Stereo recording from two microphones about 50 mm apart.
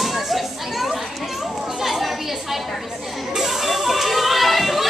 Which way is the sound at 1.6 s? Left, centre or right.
Centre.